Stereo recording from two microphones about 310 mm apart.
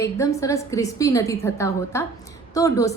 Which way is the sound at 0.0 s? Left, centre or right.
Centre.